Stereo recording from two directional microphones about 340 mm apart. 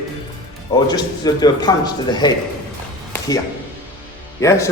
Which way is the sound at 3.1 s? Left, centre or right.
Centre.